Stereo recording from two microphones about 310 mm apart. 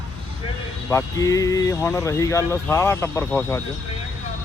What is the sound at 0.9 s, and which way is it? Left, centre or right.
Speech, centre.